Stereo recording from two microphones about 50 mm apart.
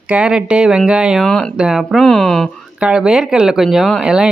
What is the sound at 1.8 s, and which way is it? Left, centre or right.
Speech, centre.